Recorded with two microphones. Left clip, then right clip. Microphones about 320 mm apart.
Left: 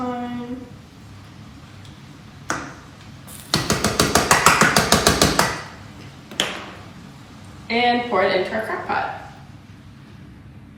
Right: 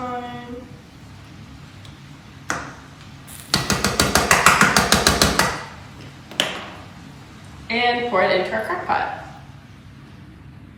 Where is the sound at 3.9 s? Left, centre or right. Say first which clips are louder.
Even; centre.